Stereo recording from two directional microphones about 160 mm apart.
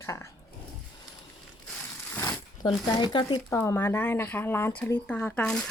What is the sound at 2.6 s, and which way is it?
Speech, 25° left (ahead or behind).